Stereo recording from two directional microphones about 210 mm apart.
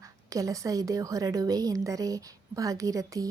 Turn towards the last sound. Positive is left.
turn(degrees=-15)  # may be behind; listen again after turning